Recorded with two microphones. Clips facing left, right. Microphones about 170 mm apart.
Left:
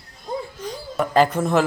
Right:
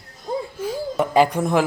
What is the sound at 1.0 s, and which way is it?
Speech, 15° right (ahead or behind).